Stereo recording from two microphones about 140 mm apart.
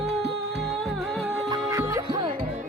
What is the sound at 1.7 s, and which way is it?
Music, 20° right (ahead or behind).